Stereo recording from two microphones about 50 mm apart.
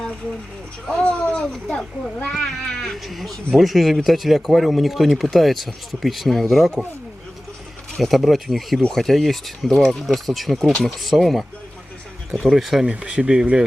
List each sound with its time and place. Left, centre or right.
0.9 s speech: left
1.6 s speech: centre
7.9 s speech: centre
12.5 s speech: centre
12.9 s speech: right